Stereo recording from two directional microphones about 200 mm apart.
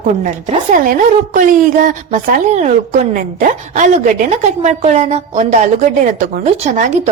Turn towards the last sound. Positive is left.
turn(degrees=-40)  # may be behind; listen again after turning